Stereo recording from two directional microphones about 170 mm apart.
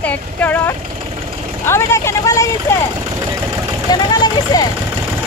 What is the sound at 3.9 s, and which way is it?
Speech, 25° left (ahead or behind).